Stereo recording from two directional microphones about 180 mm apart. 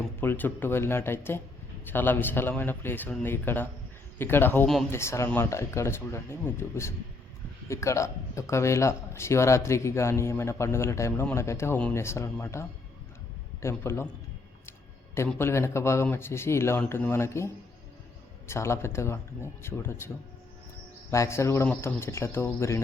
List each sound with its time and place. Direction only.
0.2 s speech: 10° left (ahead or behind)
4.9 s speech: 15° left (ahead or behind)
14.7 s a sound: 15° left (ahead or behind)
15.3 s speech: 15° left (ahead or behind)
21.1 s speech: 15° left (ahead or behind)